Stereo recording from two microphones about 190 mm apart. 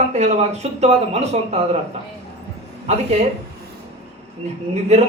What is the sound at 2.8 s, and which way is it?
Speech, 35° right (ahead or behind).